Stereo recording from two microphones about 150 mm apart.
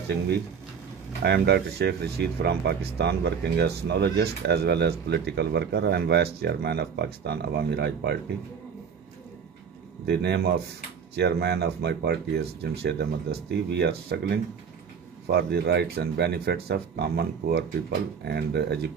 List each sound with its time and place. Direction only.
1.2 s speech: 90° right
10.0 s speech: 90° right